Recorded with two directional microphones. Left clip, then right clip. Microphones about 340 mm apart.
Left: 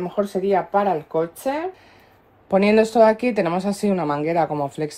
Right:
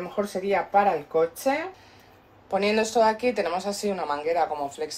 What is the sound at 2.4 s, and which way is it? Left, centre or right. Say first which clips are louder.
Speech: left 7 dB; left.